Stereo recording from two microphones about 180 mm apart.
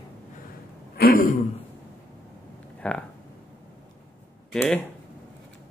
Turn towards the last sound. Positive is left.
turn(degrees=10)  # may be behind; listen again after turning